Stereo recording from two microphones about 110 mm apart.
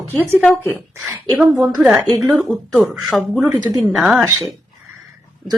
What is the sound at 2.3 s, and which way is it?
Speech, 15° right (ahead or behind).